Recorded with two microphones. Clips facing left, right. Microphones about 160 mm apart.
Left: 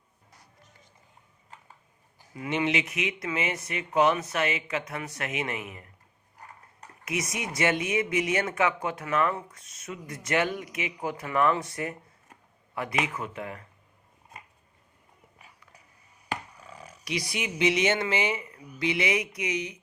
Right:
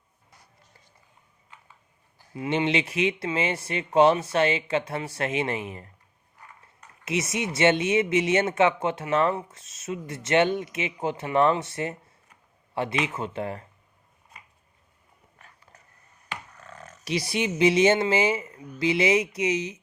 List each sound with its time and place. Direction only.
2.3 s speech: 25° right (ahead or behind)
7.0 s speech: 25° right (ahead or behind)
16.5 s a sound: 10° left (ahead or behind)
17.0 s speech: 30° right (ahead or behind)